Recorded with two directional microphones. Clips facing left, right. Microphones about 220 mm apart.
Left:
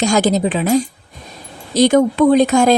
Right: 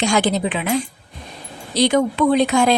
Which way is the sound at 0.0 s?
40° left (ahead or behind).